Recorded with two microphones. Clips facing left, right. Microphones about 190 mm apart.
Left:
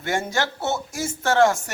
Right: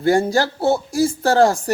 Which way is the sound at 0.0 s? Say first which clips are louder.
Right 8 dB; 35° right (ahead or behind).